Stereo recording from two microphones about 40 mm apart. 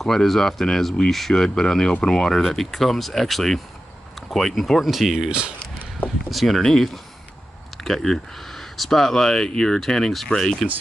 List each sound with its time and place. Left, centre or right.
0.0 s speech: centre
4.8 s speech: centre
6.3 s speech: centre
6.6 s speech: centre